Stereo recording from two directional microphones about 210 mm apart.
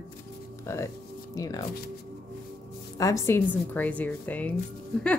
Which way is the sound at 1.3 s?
15° left (ahead or behind).